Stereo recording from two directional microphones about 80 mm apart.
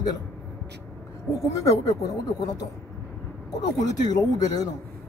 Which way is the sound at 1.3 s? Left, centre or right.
Left.